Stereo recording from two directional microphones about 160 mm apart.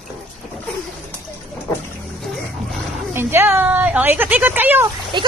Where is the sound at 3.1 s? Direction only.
15° right (ahead or behind).